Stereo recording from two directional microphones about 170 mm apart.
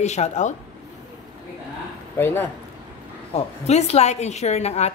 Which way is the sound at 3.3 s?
40° left (ahead or behind).